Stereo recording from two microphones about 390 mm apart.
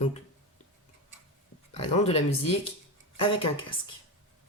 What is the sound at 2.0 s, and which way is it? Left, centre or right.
Speech, centre.